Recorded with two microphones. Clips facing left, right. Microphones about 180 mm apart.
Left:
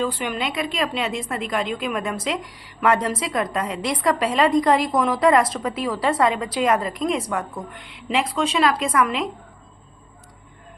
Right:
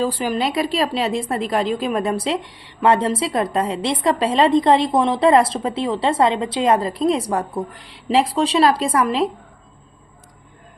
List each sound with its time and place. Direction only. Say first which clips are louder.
0.0 s a woman's voice: right 4 dB; 35° right (ahead or behind)